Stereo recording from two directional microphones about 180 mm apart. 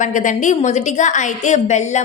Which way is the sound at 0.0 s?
45° left (ahead or behind).